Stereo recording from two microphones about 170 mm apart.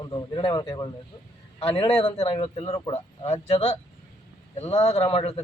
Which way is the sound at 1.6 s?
35° left (ahead or behind).